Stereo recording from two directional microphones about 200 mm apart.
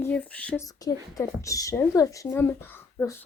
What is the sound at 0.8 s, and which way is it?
Speech, 15° left (ahead or behind).